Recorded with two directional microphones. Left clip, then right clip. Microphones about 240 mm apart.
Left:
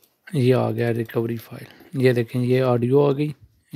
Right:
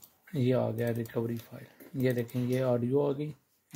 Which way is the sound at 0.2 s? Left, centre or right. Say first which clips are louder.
Left 9 dB; left.